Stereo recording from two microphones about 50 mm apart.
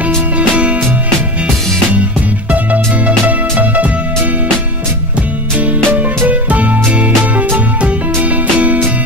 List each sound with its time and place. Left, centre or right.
0.4 s music: right
2.5 s music: right
5.9 s music: right